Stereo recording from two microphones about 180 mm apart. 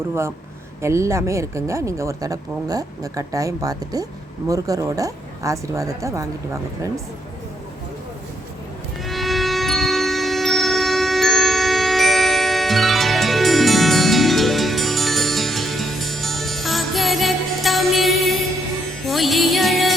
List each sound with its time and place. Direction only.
0.8 s speech: 15° right (ahead or behind)
9.0 s music: centre (ahead or behind)